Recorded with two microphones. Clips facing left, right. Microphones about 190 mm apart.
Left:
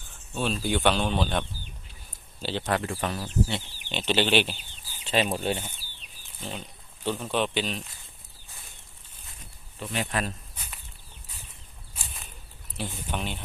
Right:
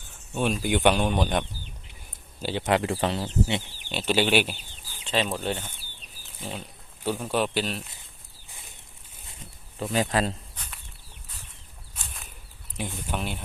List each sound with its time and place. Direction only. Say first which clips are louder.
0.3 s speech: right 2 dB; 15° right (ahead or behind)
2.7 s speech: right 7 dB; 30° right (ahead or behind)
3.8 s speech: right 1 dB; 10° right (ahead or behind)
5.0 s speech: left 1 dB; 10° left (ahead or behind)
6.4 s speech: right 1 dB; 5° right (ahead or behind)
9.8 s speech: right 5 dB; 40° right (ahead or behind)
12.9 s speech: right 2 dB; 5° right (ahead or behind)